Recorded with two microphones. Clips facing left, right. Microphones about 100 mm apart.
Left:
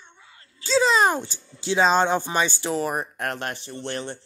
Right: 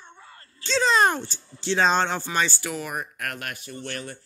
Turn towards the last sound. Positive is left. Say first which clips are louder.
# left 4 dB
turn(degrees=25)  # may be behind; listen again after turning